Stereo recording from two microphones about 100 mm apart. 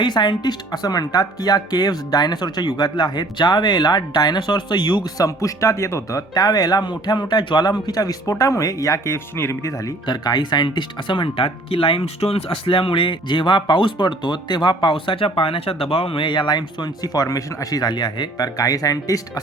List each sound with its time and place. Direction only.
0.0 s speech: 45° left (ahead or behind); by 9.7 s 25° left (ahead or behind)
10.1 s speech: 45° left (ahead or behind)